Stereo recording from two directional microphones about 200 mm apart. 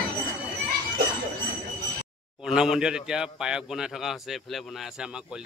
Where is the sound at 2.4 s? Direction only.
5° right (ahead or behind).